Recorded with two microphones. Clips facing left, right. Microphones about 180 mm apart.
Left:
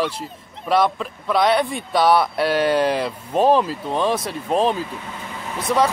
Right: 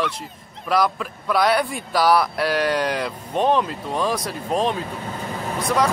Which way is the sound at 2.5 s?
30° left (ahead or behind).